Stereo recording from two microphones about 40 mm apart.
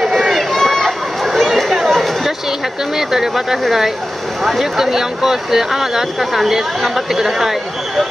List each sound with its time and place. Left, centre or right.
0.0 s run: centre
0.3 s a sound: centre
1.7 s chatter: centre
3.0 s speech: centre